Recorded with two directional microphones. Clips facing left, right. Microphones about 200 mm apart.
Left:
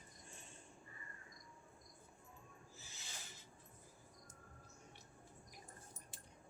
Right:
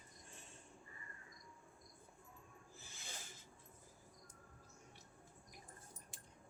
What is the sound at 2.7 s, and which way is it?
Owl, 55° right (ahead or behind).